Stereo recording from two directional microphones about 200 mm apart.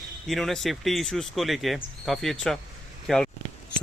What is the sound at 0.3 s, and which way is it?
Speech, centre (ahead or behind).